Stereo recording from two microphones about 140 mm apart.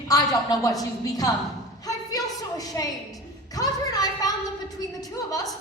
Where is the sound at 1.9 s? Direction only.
25° left (ahead or behind).